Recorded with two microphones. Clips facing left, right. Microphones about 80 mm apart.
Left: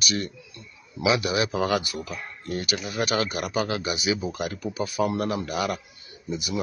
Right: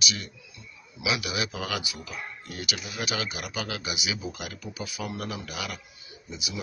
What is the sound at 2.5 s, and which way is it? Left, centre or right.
Speech, left.